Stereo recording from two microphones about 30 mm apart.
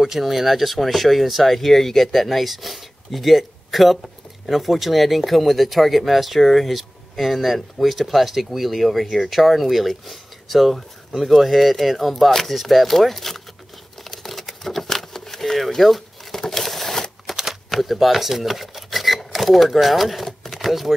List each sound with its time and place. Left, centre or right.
0.2 s speech: centre
14.0 s a sound: centre
16.3 s crumpling: centre
17.3 s shuffling cards: centre
17.6 s speech: centre
20.2 s a sound: centre
20.6 s speech: centre